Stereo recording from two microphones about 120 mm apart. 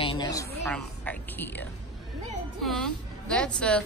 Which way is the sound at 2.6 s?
5° left (ahead or behind).